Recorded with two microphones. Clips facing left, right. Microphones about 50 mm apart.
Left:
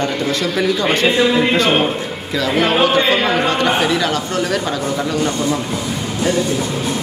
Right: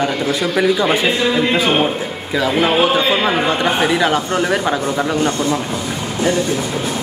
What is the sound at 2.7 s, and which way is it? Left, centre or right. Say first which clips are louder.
A man's voice: even; centre.